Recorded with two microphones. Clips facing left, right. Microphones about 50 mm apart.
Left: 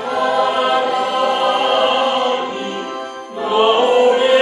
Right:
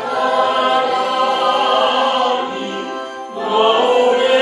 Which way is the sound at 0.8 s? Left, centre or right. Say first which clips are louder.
Right 1 dB; centre.